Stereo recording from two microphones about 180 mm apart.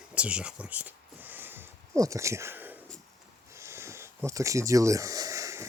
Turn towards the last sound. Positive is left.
turn(degrees=-15)  # may be behind; listen again after turning